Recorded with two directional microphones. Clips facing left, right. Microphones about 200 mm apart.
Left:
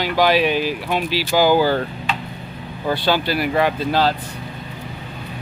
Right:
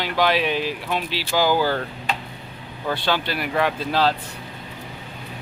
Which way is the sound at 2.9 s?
5° left (ahead or behind).